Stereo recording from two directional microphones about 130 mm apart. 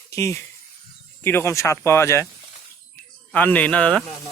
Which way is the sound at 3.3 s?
10° left (ahead or behind).